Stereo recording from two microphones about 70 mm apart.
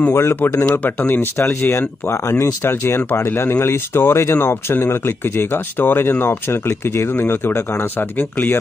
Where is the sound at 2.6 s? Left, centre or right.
Left.